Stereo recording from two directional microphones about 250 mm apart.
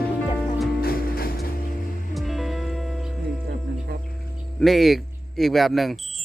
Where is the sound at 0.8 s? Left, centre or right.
Left.